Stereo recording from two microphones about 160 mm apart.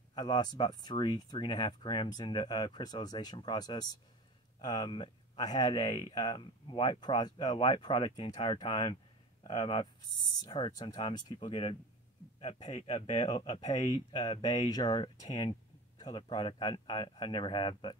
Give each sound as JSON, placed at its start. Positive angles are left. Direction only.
{"t": 0.1, "sound": "speech", "side_deg": 25}
{"t": 14.7, "sound": "speech", "side_deg": 25}